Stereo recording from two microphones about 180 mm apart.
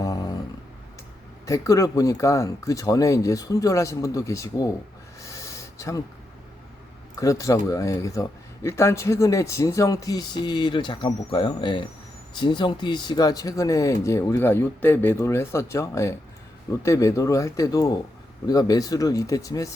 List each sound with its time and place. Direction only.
1.5 s speech: 20° left (ahead or behind)
5.2 s a sound: 15° left (ahead or behind)
7.2 s speech: 20° left (ahead or behind)